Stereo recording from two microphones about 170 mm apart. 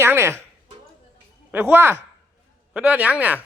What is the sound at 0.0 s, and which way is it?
Speech, 15° right (ahead or behind).